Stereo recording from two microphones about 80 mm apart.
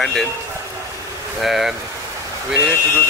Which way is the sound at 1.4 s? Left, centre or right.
Centre.